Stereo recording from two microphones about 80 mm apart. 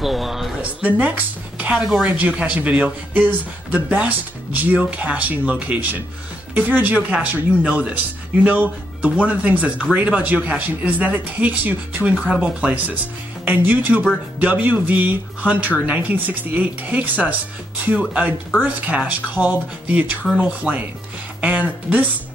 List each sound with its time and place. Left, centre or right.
0.0 s a sound: centre
0.6 s a woman's voice: centre
18.6 s speech: centre